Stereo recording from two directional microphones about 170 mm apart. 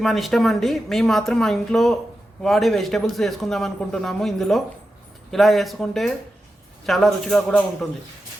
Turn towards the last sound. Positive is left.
turn(degrees=5)  # may be behind; listen again after turning